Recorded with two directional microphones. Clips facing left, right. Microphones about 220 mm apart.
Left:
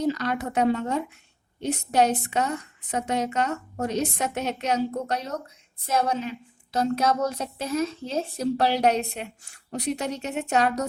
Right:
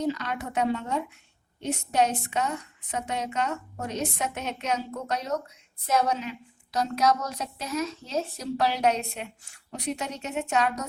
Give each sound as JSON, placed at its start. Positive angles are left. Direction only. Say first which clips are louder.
{"t": 0.1, "sound": "a woman's voice", "louder": "left 4 dB", "side_deg": 40}